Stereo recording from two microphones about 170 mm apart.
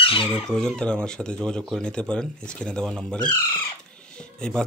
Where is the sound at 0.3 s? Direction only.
5° left (ahead or behind).